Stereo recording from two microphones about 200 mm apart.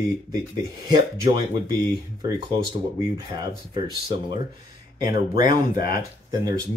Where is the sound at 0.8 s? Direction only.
20° right (ahead or behind).